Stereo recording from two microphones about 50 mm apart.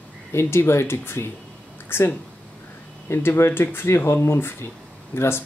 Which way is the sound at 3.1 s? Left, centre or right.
Left.